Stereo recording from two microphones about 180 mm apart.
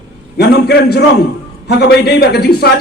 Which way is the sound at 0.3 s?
65° left (ahead or behind).